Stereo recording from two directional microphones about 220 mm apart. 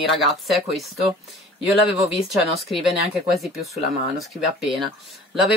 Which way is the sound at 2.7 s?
Centre (ahead or behind).